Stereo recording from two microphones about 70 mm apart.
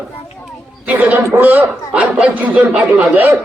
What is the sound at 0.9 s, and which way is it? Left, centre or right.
A man's voice, right.